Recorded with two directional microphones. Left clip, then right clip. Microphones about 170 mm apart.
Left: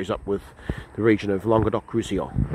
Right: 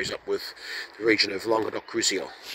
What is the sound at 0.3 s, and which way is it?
Speech, centre (ahead or behind).